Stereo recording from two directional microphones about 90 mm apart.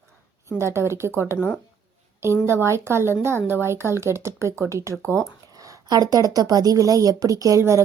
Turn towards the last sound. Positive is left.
turn(degrees=-30)  # may be behind; listen again after turning